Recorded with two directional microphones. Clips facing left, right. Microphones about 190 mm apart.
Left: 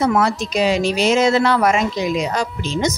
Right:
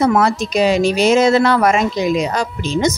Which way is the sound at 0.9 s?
45° right (ahead or behind).